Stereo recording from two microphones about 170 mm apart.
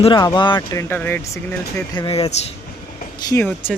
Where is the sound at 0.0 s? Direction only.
25° left (ahead or behind).